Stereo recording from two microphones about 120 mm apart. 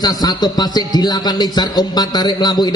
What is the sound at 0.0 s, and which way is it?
A man's voice, 35° left (ahead or behind).